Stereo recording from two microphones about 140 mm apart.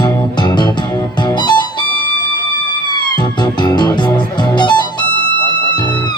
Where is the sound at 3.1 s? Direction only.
30° left (ahead or behind).